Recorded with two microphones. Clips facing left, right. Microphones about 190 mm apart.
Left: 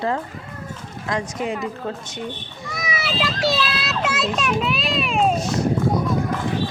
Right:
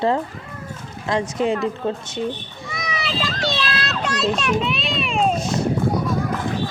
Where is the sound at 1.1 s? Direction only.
25° right (ahead or behind).